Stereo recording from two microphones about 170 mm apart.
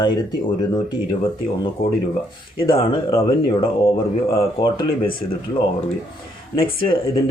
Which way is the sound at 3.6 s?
30° left (ahead or behind).